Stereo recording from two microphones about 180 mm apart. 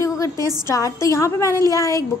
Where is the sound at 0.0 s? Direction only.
20° left (ahead or behind).